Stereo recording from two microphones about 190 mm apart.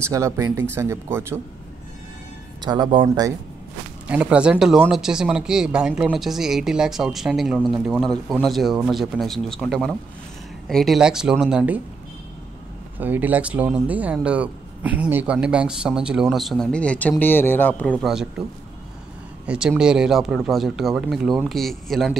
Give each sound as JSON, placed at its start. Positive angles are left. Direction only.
{"t": 0.0, "sound": "speech", "side_deg": -15}
{"t": 2.6, "sound": "speech", "side_deg": -25}
{"t": 4.1, "sound": "speech", "side_deg": -5}
{"t": 13.0, "sound": "speech", "side_deg": -10}
{"t": 19.4, "sound": "speech", "side_deg": -5}